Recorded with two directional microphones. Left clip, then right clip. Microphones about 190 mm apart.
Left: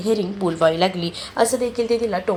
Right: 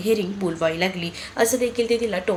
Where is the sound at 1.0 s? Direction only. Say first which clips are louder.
Left 2 dB; 10° right (ahead or behind).